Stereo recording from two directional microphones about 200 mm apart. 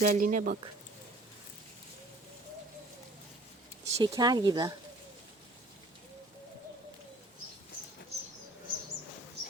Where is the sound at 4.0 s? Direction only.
20° right (ahead or behind).